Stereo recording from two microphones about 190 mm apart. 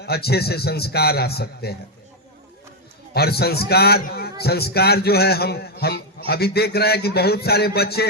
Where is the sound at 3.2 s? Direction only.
55° left (ahead or behind).